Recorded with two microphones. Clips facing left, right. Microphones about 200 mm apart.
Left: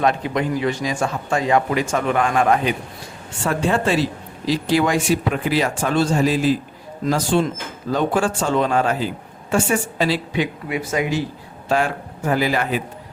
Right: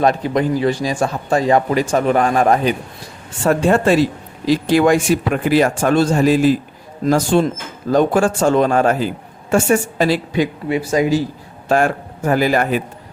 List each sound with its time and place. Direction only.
0.0 s speech: 35° right (ahead or behind)
11.7 s speech: 50° right (ahead or behind)